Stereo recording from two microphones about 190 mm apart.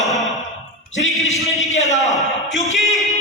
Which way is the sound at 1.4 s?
Centre (ahead or behind).